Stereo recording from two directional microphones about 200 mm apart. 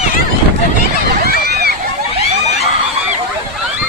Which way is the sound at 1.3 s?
55° right (ahead or behind).